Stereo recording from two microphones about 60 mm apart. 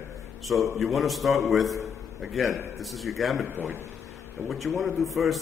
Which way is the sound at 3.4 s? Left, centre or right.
Right.